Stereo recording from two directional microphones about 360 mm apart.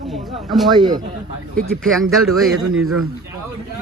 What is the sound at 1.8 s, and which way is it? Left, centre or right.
Speech, centre.